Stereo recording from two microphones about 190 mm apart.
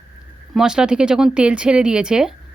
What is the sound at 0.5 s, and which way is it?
Speech, 5° right (ahead or behind).